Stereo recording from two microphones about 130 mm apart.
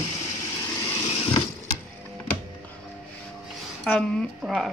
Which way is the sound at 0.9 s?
50° left (ahead or behind).